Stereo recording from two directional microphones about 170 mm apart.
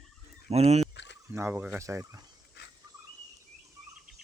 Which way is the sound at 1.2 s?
15° right (ahead or behind).